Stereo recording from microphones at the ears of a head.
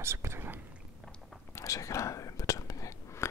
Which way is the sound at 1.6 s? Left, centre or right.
Left.